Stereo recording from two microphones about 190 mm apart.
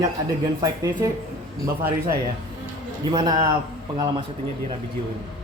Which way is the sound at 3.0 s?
20° right (ahead or behind).